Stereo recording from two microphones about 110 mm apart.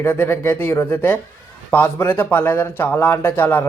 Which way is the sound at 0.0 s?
20° left (ahead or behind).